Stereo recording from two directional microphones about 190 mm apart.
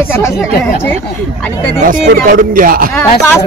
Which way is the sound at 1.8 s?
45° right (ahead or behind).